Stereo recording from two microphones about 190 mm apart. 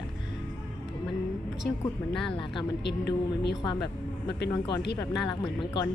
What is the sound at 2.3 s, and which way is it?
Speech, 25° left (ahead or behind).